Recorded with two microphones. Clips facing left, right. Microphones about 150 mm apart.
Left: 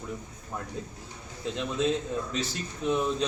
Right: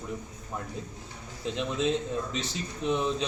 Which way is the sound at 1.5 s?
Centre (ahead or behind).